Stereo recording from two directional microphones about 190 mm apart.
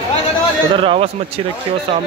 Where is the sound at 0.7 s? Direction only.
30° right (ahead or behind).